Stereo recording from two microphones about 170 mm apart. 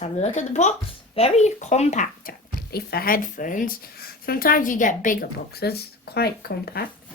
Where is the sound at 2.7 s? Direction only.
65° left (ahead or behind).